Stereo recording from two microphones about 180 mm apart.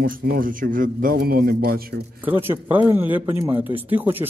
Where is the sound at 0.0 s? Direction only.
55° right (ahead or behind).